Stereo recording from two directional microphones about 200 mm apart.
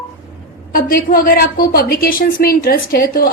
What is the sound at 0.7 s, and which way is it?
A woman's voice, 45° left (ahead or behind).